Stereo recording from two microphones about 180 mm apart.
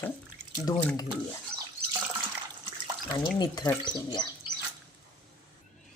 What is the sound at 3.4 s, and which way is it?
Speech, 15° left (ahead or behind).